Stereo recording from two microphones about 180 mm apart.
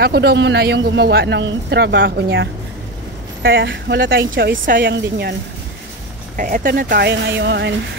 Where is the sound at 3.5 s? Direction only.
80° right; by 4.9 s 55° right (ahead or behind).